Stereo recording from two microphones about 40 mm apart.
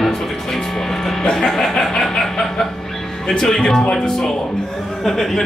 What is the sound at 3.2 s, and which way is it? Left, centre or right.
Speech, centre.